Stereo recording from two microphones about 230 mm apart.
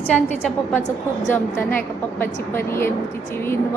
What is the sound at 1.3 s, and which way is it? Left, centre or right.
A woman's voice, centre.